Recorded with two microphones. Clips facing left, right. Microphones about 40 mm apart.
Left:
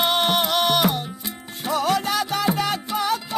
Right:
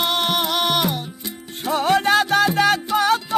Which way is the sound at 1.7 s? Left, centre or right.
Right.